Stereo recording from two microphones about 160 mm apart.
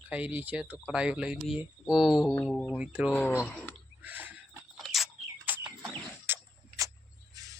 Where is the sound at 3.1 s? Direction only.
10° left (ahead or behind).